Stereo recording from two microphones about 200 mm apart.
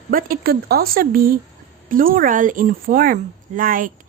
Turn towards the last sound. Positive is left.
turn(degrees=-45)  # may be behind; listen again after turning